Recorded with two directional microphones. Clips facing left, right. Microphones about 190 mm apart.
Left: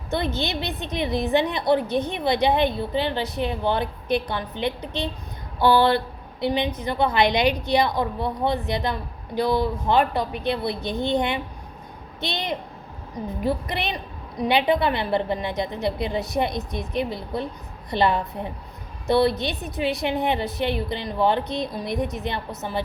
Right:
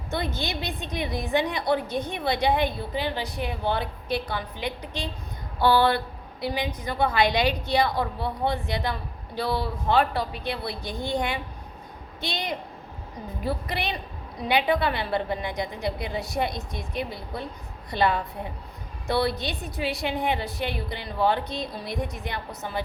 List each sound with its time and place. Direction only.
0.1 s a woman's voice: 20° left (ahead or behind)
6.4 s a woman's voice: 25° left (ahead or behind)